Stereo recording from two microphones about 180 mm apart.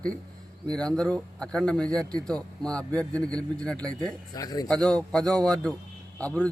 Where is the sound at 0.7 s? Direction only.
5° left (ahead or behind).